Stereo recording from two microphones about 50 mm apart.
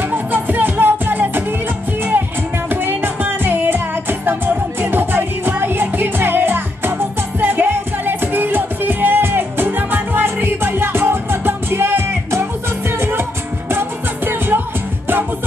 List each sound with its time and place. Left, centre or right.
0.0 s music: right
2.7 s music: right